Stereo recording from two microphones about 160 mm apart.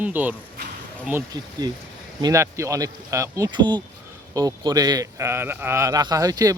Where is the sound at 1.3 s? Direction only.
25° right (ahead or behind).